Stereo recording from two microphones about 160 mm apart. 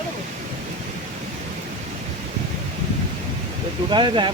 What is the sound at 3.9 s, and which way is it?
Speech, 30° right (ahead or behind).